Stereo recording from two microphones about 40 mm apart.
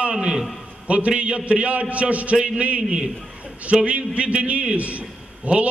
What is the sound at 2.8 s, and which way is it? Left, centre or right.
Speech, centre.